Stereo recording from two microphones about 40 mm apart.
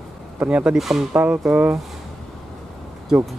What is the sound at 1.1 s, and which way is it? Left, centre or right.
Speech, right.